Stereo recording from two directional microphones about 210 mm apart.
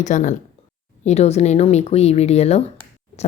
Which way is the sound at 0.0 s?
35° left (ahead or behind).